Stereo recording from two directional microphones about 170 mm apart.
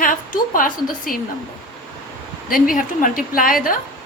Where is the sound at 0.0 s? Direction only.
55° left (ahead or behind).